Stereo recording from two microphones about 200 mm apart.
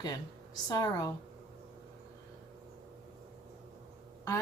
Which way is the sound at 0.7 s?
20° left (ahead or behind).